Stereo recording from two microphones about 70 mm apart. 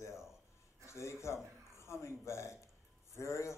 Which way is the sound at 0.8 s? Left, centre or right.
Left.